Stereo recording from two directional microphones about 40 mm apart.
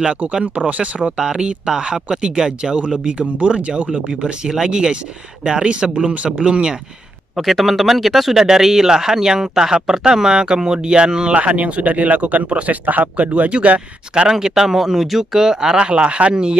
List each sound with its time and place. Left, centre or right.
0.1 s speech: right
1.1 s speech: right
7.3 s speech: centre
11.3 s speech: right
14.3 s speech: centre